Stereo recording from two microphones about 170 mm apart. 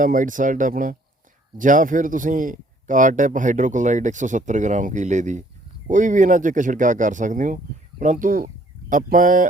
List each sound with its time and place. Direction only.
0.0 s a man's voice: 50° right (ahead or behind)